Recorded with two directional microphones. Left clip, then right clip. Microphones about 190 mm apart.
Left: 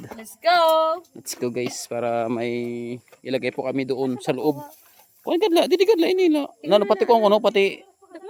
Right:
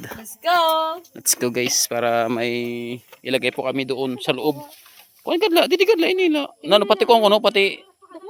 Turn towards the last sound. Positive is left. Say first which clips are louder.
# right 2 dB
turn(degrees=25)  # may be behind; listen again after turning